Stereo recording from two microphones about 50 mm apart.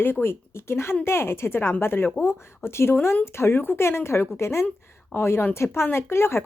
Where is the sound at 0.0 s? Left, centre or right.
Left.